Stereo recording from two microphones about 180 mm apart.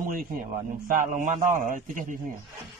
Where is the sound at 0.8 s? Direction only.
45° right (ahead or behind).